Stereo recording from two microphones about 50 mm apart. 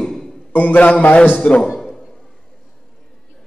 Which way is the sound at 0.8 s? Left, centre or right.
Left.